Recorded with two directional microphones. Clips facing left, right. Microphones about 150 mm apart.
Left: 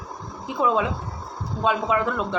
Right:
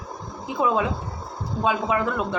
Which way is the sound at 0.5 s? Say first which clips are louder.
Even; 10° right (ahead or behind).